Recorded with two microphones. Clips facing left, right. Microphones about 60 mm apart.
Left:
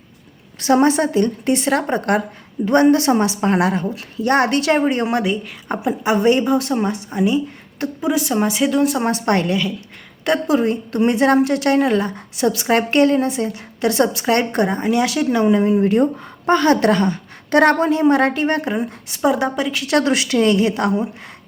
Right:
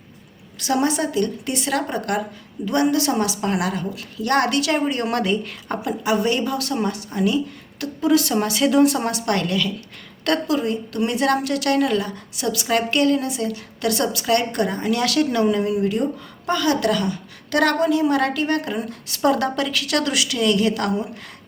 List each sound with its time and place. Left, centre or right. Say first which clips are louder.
0.6 s a woman's voice: left 6 dB; left
5.2 s speech: left 1 dB; centre
5.9 s a woman's voice: left 5 dB; left
8.6 s speech: right 3 dB; centre
9.0 s a woman's voice: left 4 dB; left
10.4 s a woman's voice: left 4 dB; left
19.2 s a woman's voice: left 2 dB; centre